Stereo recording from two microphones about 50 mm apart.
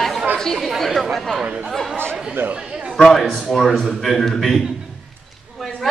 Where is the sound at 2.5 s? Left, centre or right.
Right.